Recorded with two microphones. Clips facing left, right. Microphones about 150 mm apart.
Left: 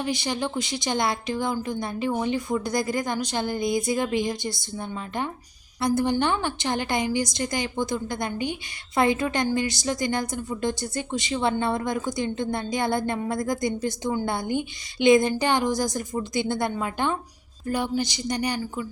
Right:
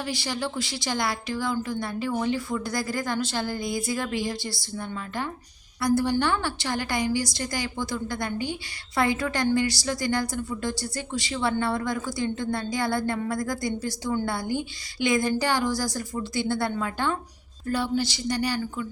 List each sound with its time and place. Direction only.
0.0 s speech: 20° left (ahead or behind)